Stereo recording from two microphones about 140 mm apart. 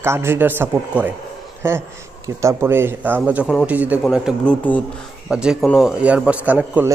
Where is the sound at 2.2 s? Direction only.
20° right (ahead or behind).